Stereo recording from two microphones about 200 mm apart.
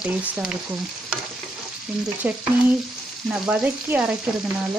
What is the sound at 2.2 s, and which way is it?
Frying, 10° right (ahead or behind).